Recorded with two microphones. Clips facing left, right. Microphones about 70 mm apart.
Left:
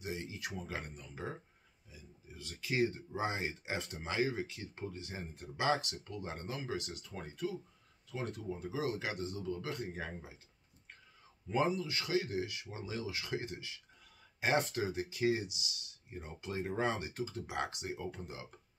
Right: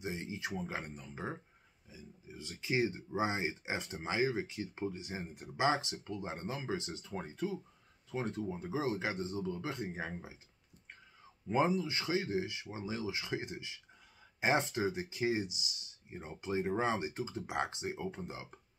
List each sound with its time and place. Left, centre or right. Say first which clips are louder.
0.0 s speech: right 2 dB; right
11.4 s speech: right 2 dB; right